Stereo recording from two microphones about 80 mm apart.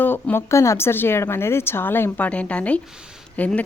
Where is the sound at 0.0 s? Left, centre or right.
Left.